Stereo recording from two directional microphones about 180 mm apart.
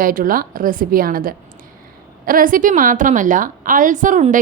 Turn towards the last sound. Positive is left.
turn(degrees=-45)  # may be behind; listen again after turning